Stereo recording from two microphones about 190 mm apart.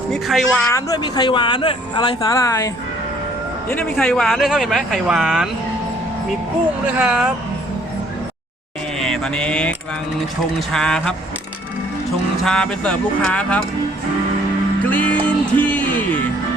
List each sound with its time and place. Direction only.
0.1 s speech: centre (ahead or behind)
0.7 s speech: 20° left (ahead or behind); by 5.5 s 5° right (ahead or behind)
6.8 s speech: 5° right (ahead or behind)
9.0 s a sound: 5° left (ahead or behind)
10.7 s speech: 5° left (ahead or behind)
12.4 s speech: 5° left (ahead or behind)
14.8 s music: 10° left (ahead or behind)